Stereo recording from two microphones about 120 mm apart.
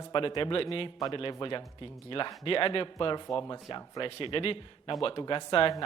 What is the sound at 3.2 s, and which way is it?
Speech, 35° left (ahead or behind).